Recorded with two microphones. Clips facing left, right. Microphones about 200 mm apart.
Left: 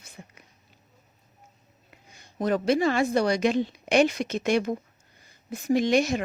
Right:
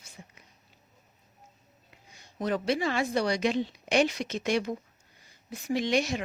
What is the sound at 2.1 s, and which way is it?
A woman's voice, 45° left (ahead or behind).